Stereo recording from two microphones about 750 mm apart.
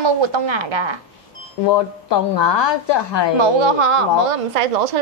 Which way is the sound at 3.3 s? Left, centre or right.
Right.